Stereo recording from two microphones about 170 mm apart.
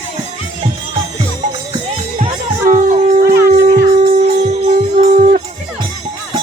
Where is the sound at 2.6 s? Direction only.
50° right (ahead or behind).